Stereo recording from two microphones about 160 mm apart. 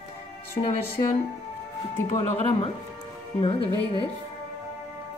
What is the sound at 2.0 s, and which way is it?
Speech, 35° left (ahead or behind).